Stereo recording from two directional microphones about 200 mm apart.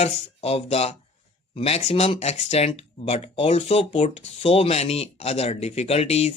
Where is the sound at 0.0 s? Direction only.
30° left (ahead or behind).